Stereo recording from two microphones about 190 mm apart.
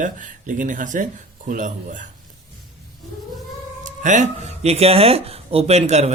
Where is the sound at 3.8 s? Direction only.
40° right (ahead or behind).